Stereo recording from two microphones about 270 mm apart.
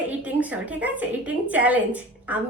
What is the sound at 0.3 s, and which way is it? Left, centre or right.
A woman's voice, centre.